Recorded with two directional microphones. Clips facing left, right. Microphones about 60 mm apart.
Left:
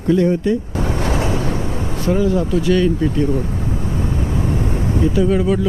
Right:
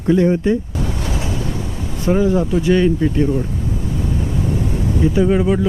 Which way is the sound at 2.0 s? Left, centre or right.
Right.